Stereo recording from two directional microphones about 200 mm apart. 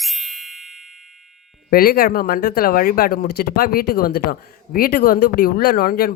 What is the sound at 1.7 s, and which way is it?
Speech, 50° left (ahead or behind).